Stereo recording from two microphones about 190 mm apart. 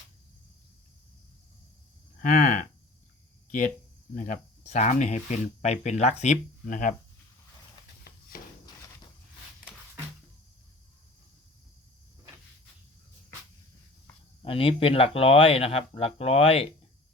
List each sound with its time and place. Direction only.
2.2 s speech: 40° left (ahead or behind)
4.1 s speech: 40° left (ahead or behind)
14.4 s speech: 30° left (ahead or behind)